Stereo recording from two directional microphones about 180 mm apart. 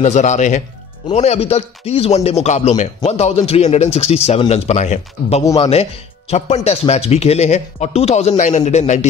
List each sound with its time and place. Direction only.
0.0 s speech: 40° left (ahead or behind)